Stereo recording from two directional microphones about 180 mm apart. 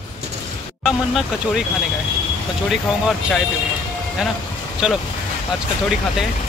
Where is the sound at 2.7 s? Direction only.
Centre (ahead or behind).